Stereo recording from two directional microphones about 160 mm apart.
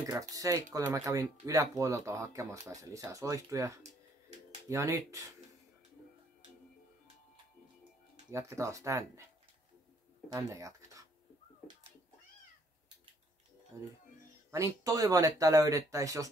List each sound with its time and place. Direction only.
0.0 s speech: 20° right (ahead or behind)
8.3 s speech: 20° right (ahead or behind)
10.3 s speech: 20° right (ahead or behind)
13.7 s speech: 15° right (ahead or behind)